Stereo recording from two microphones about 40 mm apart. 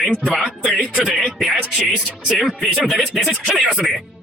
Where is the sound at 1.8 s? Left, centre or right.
Right.